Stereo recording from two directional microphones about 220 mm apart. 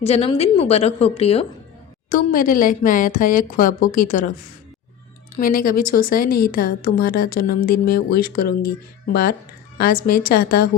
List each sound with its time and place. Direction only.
0.0 s a woman's voice: 25° left (ahead or behind)
2.0 s a woman's voice: 40° left (ahead or behind)
5.4 s a woman's voice: 40° left (ahead or behind)
9.7 s a woman's voice: 45° left (ahead or behind)